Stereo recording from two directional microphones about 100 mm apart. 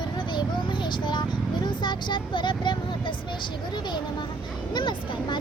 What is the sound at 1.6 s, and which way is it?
Speech, 50° left (ahead or behind).